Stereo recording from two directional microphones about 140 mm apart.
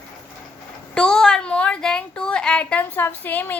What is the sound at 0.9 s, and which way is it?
A woman's voice, 5° left (ahead or behind).